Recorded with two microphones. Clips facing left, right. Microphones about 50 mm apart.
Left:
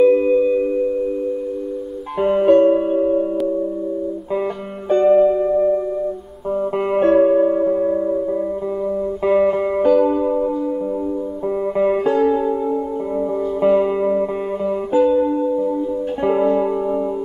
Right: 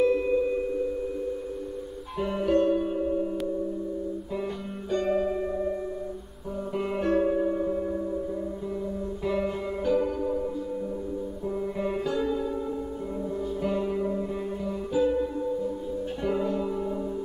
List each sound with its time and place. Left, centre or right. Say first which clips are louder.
0.0 s singing bowl: left 10 dB; left
2.1 s music: left 12 dB; left
2.9 s singing bowl: left 10 dB; left
4.8 s music: left 13 dB; left
6.9 s music: left 12 dB; left
9.2 s music: left 13 dB; left
11.8 s music: left 13 dB; left
13.6 s music: left 14 dB; left